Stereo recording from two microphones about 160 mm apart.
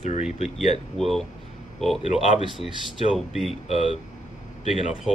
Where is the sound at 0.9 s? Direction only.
Centre (ahead or behind).